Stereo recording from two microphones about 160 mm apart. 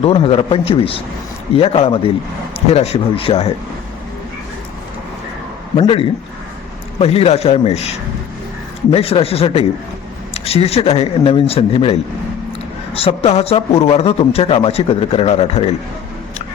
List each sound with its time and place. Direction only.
0.0 s a man's voice: 35° left (ahead or behind)
5.8 s a man's voice: 35° left (ahead or behind)